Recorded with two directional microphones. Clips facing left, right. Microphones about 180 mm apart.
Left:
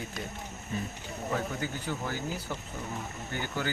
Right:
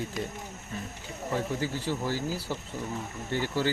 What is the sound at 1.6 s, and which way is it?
Speech, 30° right (ahead or behind).